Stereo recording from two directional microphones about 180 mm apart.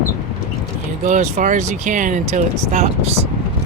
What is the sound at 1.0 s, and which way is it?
Speech, 45° right (ahead or behind).